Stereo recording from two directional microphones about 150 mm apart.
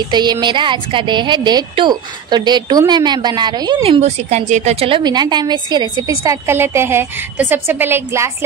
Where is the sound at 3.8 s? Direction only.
45° right (ahead or behind); by 5.9 s 30° right (ahead or behind).